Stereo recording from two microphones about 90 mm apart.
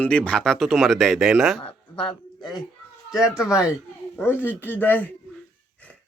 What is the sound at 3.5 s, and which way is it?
Speech, 10° right (ahead or behind).